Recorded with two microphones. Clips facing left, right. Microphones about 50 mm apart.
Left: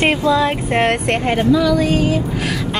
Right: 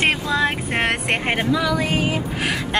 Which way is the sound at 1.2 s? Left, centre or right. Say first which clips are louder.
Left 7 dB; centre.